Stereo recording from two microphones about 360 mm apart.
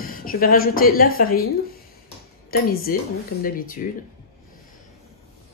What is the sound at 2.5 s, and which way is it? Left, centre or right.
Speech, left.